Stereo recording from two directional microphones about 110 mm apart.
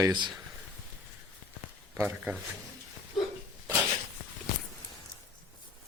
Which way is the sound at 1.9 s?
15° right (ahead or behind).